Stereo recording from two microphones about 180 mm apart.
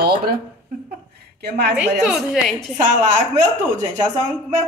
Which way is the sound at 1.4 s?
60° right (ahead or behind).